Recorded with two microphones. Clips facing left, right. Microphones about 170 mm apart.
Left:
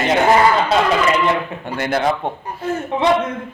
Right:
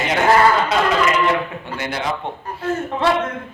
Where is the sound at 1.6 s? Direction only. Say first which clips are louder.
Left 6 dB; 50° left (ahead or behind).